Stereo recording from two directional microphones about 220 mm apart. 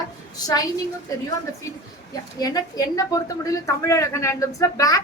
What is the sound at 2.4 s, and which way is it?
A woman's voice, 15° left (ahead or behind).